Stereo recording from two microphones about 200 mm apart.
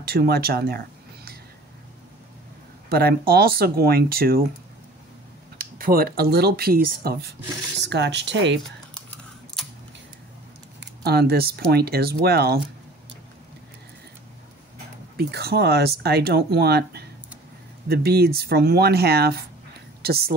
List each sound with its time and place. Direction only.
0.0 s speech: 50° right (ahead or behind)
2.9 s speech: 50° right (ahead or behind)
5.6 s speech: 45° right (ahead or behind); by 8.5 s 60° right (ahead or behind)
11.1 s speech: 50° right (ahead or behind)
15.1 s speech: 50° right (ahead or behind)